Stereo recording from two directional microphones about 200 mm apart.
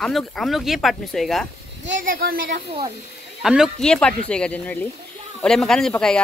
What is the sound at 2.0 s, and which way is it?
Speech, 50° right (ahead or behind).